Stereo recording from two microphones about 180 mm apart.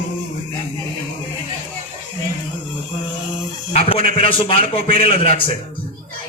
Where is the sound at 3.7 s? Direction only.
30° left (ahead or behind).